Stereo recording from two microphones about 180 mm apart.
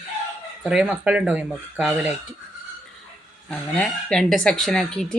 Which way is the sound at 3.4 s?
5° left (ahead or behind).